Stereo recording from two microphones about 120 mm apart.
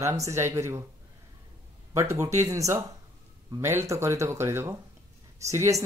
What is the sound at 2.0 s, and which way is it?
Speech, 25° right (ahead or behind).